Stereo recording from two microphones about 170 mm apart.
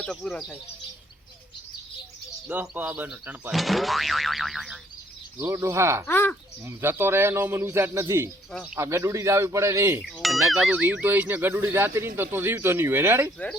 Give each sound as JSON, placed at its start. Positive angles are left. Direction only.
{"t": 0.0, "sound": "speech", "side_deg": 5}
{"t": 2.5, "sound": "speech", "side_deg": -10}
{"t": 5.4, "sound": "speech", "side_deg": -15}
{"t": 6.1, "sound": "speech", "side_deg": 10}
{"t": 6.7, "sound": "speech", "side_deg": -15}
{"t": 10.2, "sound": "speech", "side_deg": 0}